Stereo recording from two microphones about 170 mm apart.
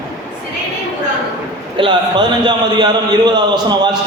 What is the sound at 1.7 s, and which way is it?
A man's voice, 30° right (ahead or behind).